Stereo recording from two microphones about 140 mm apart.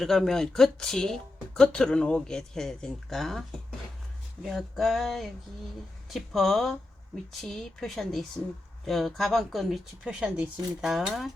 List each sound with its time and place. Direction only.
0.0 s speech: centre (ahead or behind)
4.4 s speech: centre (ahead or behind)